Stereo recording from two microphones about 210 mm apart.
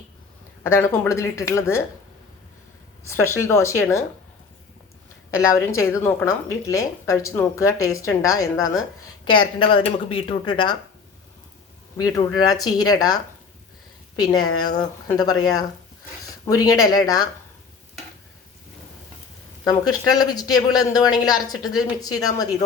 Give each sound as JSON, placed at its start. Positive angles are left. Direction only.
{"t": 0.6, "sound": "speech", "side_deg": 10}
{"t": 3.2, "sound": "speech", "side_deg": 10}
{"t": 5.3, "sound": "a woman's voice", "side_deg": 15}
{"t": 11.9, "sound": "a woman's voice", "side_deg": 15}
{"t": 19.6, "sound": "speech", "side_deg": 20}